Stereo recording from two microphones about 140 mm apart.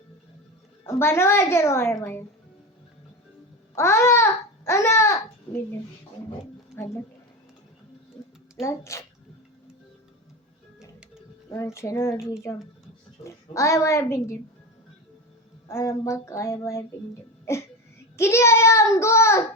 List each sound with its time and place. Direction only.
0.9 s a woman's voice: 20° left (ahead or behind)
3.8 s babbling: 20° left (ahead or behind)
8.6 s a child's voice: 20° left (ahead or behind)
10.8 s music: 5° right (ahead or behind)
11.5 s a child's voice: 20° left (ahead or behind)
15.6 s a child's voice: 20° left (ahead or behind)
18.2 s a child's voice: 20° left (ahead or behind)